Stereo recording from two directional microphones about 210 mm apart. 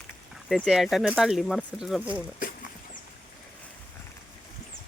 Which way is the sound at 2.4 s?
40° left (ahead or behind).